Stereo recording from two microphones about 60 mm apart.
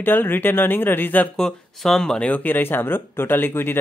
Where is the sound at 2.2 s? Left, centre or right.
Left.